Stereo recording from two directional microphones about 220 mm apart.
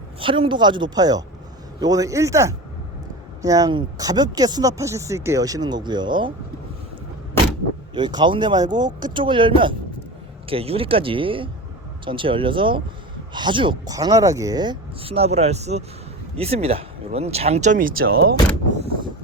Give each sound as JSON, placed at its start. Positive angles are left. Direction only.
{"t": 0.2, "sound": "speech", "side_deg": -25}
{"t": 7.9, "sound": "speech", "side_deg": -20}